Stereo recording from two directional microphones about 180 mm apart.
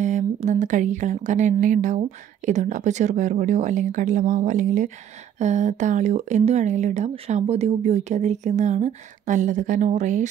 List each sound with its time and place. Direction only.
0.0 s speech: 40° right (ahead or behind)